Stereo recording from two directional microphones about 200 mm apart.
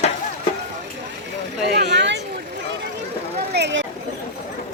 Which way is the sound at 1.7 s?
55° right (ahead or behind).